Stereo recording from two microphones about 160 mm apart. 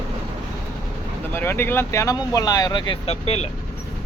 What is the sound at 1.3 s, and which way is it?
Speech, 15° left (ahead or behind).